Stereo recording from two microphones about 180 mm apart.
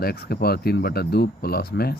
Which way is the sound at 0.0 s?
60° left (ahead or behind).